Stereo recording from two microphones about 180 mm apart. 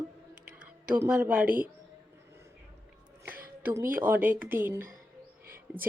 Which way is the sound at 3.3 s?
10° right (ahead or behind).